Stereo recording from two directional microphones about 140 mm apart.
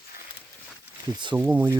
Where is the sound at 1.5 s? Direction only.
10° right (ahead or behind).